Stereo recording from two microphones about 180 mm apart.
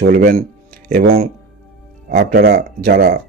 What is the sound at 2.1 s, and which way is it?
Speech, 60° right (ahead or behind).